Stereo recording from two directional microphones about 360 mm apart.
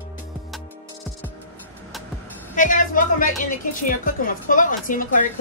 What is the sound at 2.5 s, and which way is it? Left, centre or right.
A woman's voice, left.